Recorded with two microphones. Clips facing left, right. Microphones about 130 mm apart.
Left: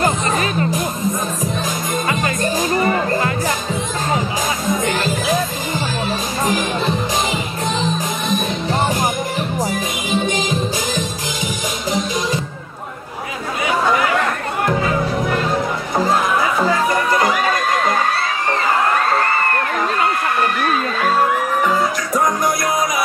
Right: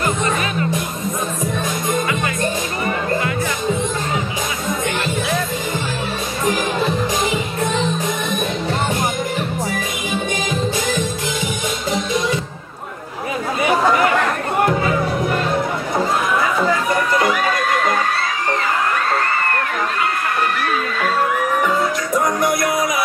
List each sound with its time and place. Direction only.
0.0 s music: 30° left (ahead or behind)
2.9 s music: 35° left (ahead or behind)
9.6 s music: 25° left (ahead or behind)
11.4 s music: 25° right (ahead or behind)